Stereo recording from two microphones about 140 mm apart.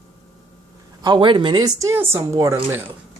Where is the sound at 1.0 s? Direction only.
35° right (ahead or behind).